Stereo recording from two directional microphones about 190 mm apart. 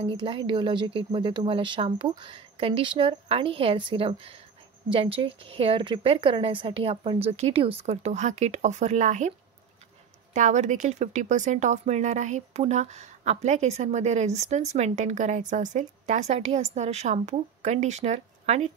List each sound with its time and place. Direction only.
0.0 s speech: 25° right (ahead or behind)
10.3 s speech: 40° right (ahead or behind)